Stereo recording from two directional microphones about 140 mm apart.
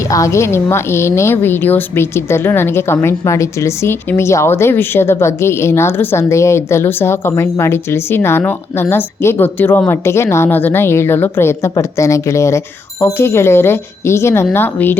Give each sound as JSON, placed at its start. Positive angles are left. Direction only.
{"t": 0.1, "sound": "a woman's voice", "side_deg": 20}